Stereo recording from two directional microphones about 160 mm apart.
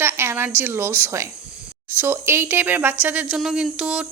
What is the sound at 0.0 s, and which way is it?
A woman's voice, 15° right (ahead or behind).